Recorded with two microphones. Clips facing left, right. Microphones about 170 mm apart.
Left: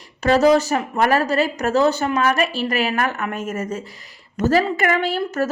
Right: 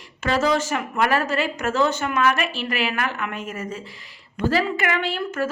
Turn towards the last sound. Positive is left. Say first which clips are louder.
# left 4 dB
turn(degrees=40)  # may be behind; listen again after turning